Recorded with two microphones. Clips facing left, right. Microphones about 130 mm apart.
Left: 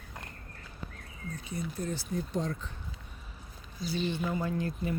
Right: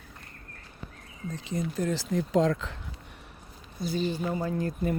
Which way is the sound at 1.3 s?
90° right.